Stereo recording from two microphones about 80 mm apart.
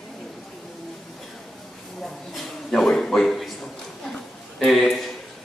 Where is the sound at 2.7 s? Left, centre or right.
Centre.